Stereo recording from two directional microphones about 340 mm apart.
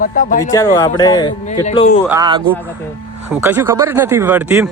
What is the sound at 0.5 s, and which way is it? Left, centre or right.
A man's voice, centre.